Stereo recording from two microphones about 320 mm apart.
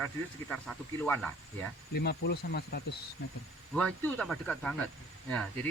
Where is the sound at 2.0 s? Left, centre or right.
Left.